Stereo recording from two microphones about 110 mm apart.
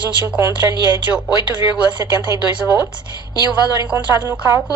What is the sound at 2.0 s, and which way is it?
Speech, 25° right (ahead or behind).